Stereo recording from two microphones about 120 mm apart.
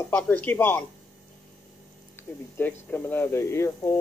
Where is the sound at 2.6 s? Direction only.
15° left (ahead or behind).